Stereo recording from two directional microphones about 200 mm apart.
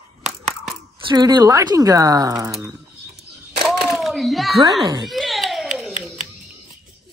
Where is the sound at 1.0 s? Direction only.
20° right (ahead or behind).